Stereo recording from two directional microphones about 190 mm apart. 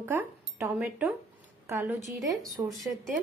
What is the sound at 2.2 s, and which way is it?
Speech, centre (ahead or behind).